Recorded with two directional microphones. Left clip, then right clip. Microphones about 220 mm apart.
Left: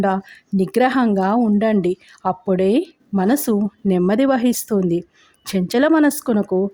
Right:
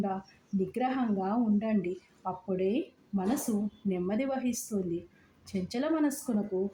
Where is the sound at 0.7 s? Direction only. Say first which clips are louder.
Left 16 dB; 45° left (ahead or behind).